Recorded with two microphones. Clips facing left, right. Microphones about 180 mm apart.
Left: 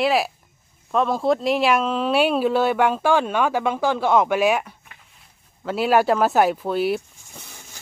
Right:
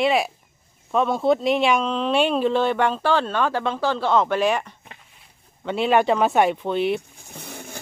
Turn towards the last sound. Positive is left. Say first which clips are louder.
# right 9 dB
turn(degrees=-60)  # may be behind; listen again after turning